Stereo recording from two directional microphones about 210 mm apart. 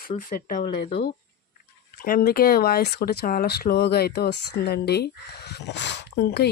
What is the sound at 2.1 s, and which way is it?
Speech, 45° left (ahead or behind).